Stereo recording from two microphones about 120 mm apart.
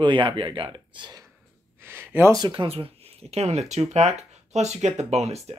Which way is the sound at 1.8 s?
20° right (ahead or behind).